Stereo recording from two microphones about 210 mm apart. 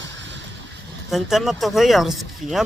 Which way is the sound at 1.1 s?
Centre (ahead or behind).